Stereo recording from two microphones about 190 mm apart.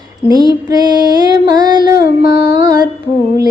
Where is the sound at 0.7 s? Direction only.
20° right (ahead or behind).